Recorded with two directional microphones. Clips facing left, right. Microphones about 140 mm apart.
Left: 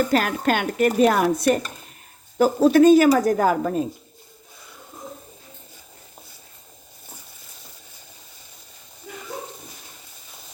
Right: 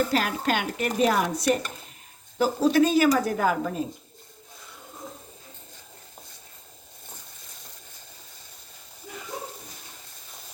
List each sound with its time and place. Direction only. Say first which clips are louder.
0.1 s speech: left 4 dB; 50° left (ahead or behind)